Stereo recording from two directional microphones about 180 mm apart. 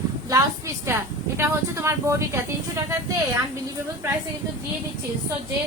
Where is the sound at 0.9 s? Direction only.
15° right (ahead or behind).